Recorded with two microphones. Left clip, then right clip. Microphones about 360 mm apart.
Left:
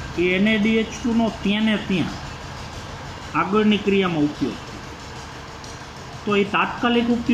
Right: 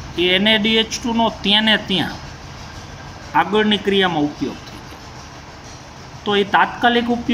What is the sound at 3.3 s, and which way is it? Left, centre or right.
Speech, right.